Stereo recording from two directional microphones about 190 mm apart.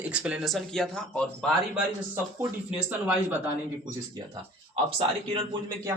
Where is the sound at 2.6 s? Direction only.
5° right (ahead or behind).